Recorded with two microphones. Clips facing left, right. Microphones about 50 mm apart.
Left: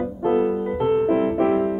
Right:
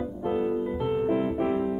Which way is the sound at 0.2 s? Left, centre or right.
Left.